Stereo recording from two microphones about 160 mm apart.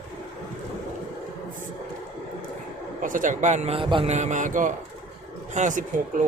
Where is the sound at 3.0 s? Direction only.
55° right (ahead or behind).